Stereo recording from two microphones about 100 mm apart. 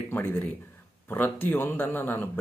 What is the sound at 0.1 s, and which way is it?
Speech, 20° left (ahead or behind).